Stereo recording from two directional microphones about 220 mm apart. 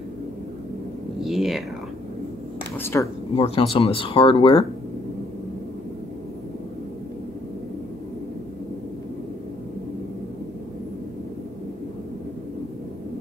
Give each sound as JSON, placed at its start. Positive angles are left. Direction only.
{"t": 1.2, "sound": "speech", "side_deg": 0}
{"t": 2.8, "sound": "speech", "side_deg": 10}
{"t": 3.3, "sound": "speech", "side_deg": 25}